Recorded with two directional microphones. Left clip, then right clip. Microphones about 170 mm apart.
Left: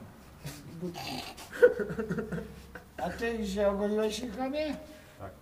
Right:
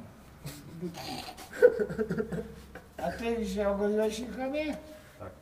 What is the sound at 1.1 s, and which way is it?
A man's voice, 25° left (ahead or behind).